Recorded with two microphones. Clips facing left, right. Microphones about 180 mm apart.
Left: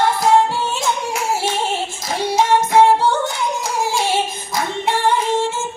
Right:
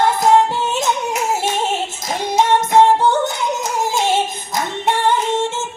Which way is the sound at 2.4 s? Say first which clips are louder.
Right 1 dB; 20° right (ahead or behind).